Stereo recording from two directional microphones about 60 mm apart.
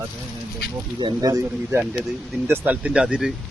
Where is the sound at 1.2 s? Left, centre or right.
Right.